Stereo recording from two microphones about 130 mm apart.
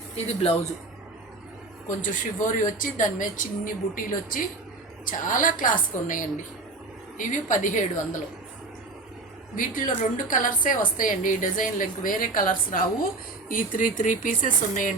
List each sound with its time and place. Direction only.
0.3 s speech: 50° left (ahead or behind)
2.0 s a woman's voice: 90° left
7.2 s a woman's voice: 75° left (ahead or behind)
9.6 s a woman's voice: 90° left